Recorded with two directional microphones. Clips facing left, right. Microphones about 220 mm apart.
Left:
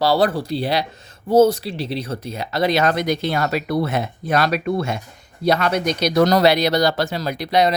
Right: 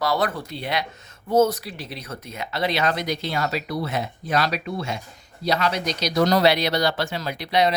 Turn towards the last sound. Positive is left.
turn(degrees=45)  # may be behind; listen again after turning